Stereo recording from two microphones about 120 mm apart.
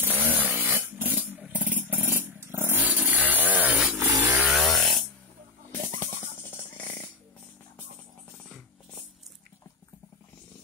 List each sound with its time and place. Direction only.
0.0 s chainsaw: 15° right (ahead or behind)
1.5 s vehicle: 15° right (ahead or behind)
4.2 s chainsaw: 15° right (ahead or behind)
4.6 s a sound: centre (ahead or behind)
5.7 s music: 20° left (ahead or behind)